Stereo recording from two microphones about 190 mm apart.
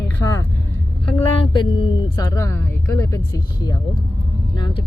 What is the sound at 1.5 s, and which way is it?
Speech, 25° left (ahead or behind).